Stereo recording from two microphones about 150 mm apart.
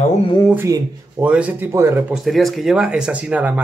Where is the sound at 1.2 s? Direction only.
10° right (ahead or behind).